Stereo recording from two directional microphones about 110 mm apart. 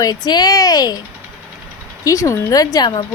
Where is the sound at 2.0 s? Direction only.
30° left (ahead or behind).